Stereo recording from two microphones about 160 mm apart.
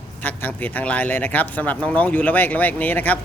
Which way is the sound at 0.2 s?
10° left (ahead or behind).